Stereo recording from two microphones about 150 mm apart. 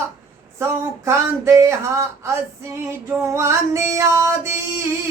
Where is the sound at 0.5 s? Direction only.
20° right (ahead or behind).